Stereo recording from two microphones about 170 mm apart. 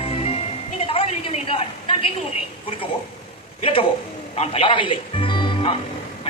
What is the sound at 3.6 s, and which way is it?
A woman's voice, 30° left (ahead or behind).